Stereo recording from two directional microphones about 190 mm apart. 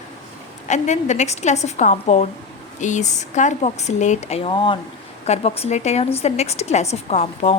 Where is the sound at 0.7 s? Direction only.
40° left (ahead or behind).